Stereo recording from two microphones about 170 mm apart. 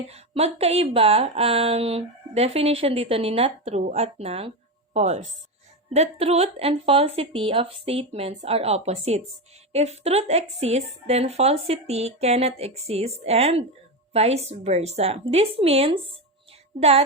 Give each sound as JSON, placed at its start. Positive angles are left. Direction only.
{"t": 0.1, "sound": "speech", "side_deg": -40}